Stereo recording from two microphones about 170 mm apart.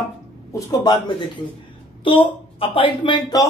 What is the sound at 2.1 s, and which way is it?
Speech, 30° left (ahead or behind).